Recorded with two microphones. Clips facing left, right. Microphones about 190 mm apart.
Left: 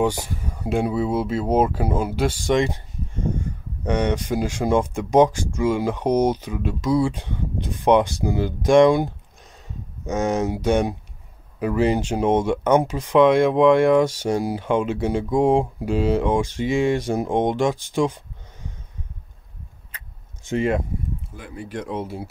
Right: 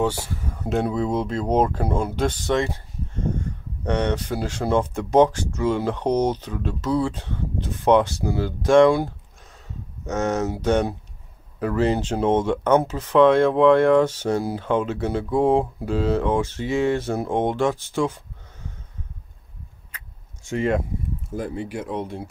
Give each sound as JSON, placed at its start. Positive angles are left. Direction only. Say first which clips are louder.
{"t": 0.0, "sound": "speech", "louder": "left 2 dB", "side_deg": 15}
{"t": 3.8, "sound": "speech", "louder": "left 1 dB", "side_deg": 10}
{"t": 20.4, "sound": "speech", "louder": "left 1 dB", "side_deg": 20}
{"t": 21.3, "sound": "speech", "louder": "right 11 dB", "side_deg": -40}
{"t": 21.6, "sound": "speech", "louder": "even", "side_deg": -5}